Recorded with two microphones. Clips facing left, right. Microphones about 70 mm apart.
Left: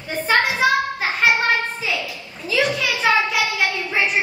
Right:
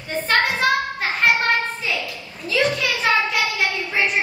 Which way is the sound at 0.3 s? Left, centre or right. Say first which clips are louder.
Left 2 dB; centre.